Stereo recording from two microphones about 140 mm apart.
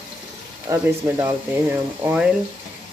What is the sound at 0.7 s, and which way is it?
Speech, 25° right (ahead or behind).